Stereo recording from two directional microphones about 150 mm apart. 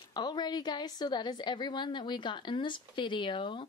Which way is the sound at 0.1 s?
30° left (ahead or behind).